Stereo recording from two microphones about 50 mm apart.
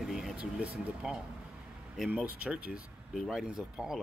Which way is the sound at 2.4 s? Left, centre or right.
Right.